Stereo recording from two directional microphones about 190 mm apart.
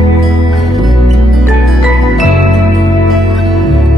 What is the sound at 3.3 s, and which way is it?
Music, centre (ahead or behind).